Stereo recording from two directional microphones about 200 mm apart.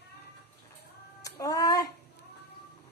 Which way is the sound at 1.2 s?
15° left (ahead or behind).